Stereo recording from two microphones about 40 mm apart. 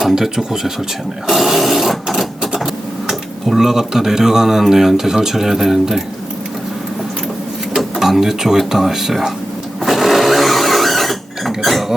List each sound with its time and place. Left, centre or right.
0.0 s speech: centre
1.3 s sewing machine: centre
3.1 s speech: centre
7.9 s speech: centre
9.8 s a sound: centre